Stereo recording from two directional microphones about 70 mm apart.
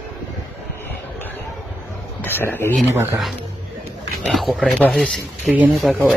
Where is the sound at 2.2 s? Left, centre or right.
Left.